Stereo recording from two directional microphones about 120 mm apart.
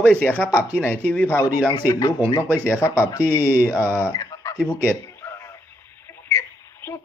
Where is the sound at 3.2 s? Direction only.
15° right (ahead or behind).